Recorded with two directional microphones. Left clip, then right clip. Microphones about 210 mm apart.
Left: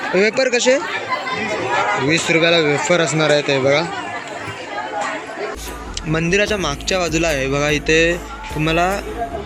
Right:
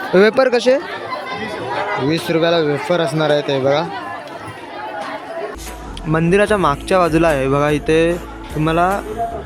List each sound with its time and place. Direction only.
0.1 s speech: 15° right (ahead or behind)
2.0 s speech: 5° right (ahead or behind)
6.1 s speech: 15° right (ahead or behind)